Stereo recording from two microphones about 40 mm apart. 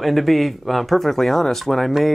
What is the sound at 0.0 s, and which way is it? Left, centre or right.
Speech, centre.